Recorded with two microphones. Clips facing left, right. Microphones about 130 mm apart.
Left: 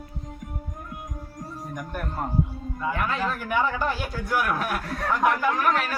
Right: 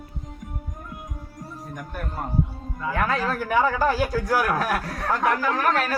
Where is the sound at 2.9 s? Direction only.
40° right (ahead or behind).